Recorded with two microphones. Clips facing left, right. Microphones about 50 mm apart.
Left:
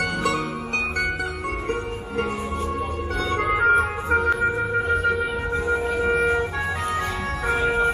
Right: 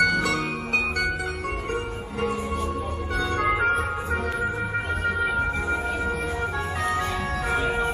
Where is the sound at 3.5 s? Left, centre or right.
Centre.